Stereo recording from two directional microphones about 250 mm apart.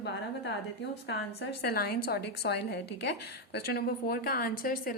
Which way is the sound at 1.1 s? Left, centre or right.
Left.